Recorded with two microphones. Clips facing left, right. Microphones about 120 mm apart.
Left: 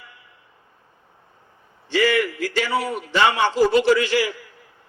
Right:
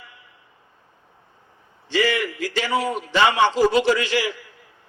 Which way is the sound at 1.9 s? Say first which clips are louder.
Left 2 dB; 15° right (ahead or behind).